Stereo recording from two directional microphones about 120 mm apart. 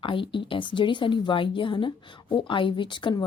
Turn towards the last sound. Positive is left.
turn(degrees=40)  # may be behind; listen again after turning